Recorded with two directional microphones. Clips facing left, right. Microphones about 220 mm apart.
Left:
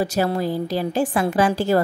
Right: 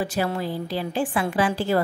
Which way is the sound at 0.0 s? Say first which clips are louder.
Left 4 dB; 40° left (ahead or behind).